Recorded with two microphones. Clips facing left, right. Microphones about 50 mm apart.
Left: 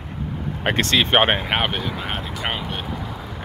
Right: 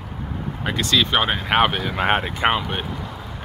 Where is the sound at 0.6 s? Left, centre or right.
Left.